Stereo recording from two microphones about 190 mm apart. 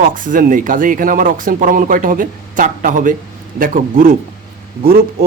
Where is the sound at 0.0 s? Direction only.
45° right (ahead or behind).